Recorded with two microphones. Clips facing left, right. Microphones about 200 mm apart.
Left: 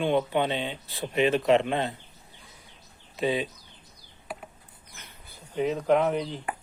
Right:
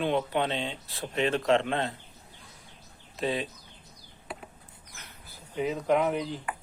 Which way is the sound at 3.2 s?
Centre (ahead or behind).